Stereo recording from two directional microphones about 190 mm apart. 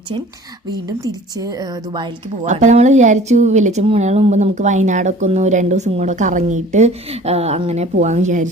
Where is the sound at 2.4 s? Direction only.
40° right (ahead or behind).